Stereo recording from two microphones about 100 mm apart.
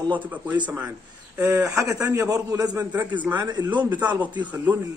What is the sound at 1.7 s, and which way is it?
Speech, 30° right (ahead or behind).